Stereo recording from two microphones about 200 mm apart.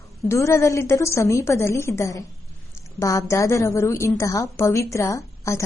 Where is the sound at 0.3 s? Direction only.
15° left (ahead or behind).